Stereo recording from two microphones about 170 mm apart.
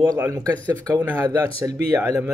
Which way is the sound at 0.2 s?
15° right (ahead or behind).